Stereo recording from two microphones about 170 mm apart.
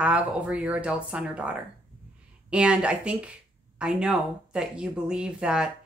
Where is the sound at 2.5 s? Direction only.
5° right (ahead or behind).